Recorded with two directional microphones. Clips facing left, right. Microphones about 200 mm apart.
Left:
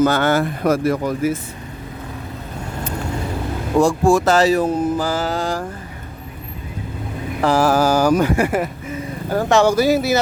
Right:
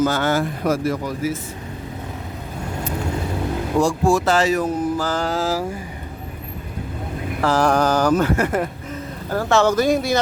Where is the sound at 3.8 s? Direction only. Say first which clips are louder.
Left 4 dB; 50° left (ahead or behind); by 4.8 s 30° left (ahead or behind).